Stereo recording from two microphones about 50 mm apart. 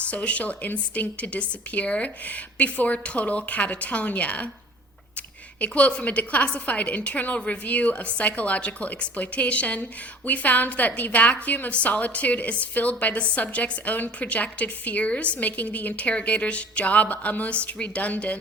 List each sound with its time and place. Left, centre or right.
0.0 s a woman's voice: left
5.5 s a woman's voice: left